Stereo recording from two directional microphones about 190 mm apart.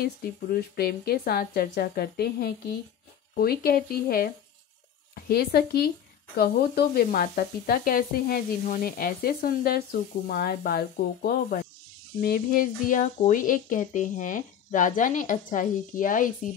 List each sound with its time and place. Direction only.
0.0 s speech: 55° left (ahead or behind)